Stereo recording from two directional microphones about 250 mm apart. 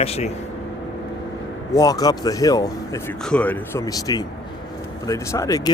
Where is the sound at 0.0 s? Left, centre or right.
Left.